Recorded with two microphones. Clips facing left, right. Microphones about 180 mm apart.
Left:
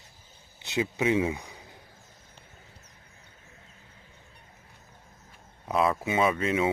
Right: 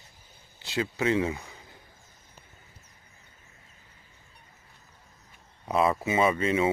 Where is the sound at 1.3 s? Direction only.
15° left (ahead or behind).